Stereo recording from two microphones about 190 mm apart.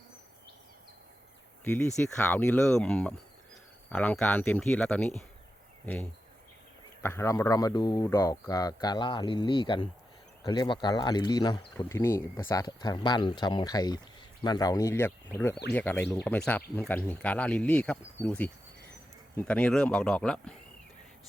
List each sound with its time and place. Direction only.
1.6 s speech: 10° left (ahead or behind)